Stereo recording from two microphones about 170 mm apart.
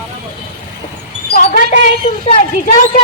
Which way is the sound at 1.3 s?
50° left (ahead or behind).